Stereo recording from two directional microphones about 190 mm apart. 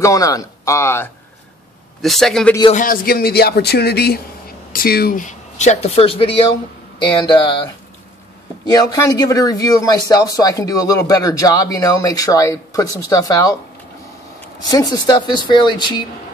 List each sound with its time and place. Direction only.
0.0 s speech: 20° left (ahead or behind)
2.0 s a man's voice: centre (ahead or behind)
2.7 s a man's voice: 45° left (ahead or behind); by 7.7 s 25° left (ahead or behind)
8.7 s speech: 20° left (ahead or behind)
14.7 s speech: 20° left (ahead or behind)